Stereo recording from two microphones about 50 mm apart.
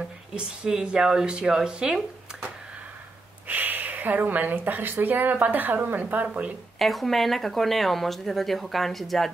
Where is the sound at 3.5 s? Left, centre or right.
Right.